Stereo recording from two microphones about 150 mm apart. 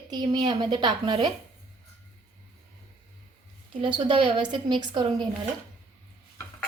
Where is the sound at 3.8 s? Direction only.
35° right (ahead or behind).